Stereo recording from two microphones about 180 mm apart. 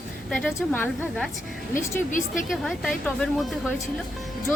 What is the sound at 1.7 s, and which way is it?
Speech, 45° left (ahead or behind).